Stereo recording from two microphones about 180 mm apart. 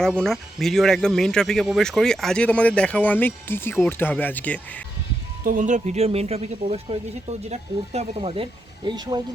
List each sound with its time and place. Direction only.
0.2 s speech: centre (ahead or behind)
5.4 s speech: 45° right (ahead or behind); by 9.2 s 25° right (ahead or behind)